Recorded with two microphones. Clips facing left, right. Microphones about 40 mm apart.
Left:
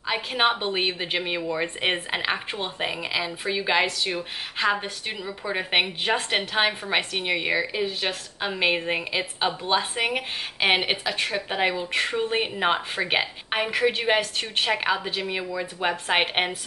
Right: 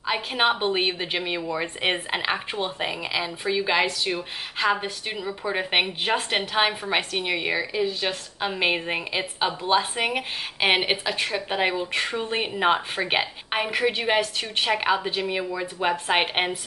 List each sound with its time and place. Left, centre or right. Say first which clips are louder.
0.0 s a woman's voice: even; centre
7.7 s speech: right 1 dB; centre
8.1 s a woman's voice: right 1 dB; centre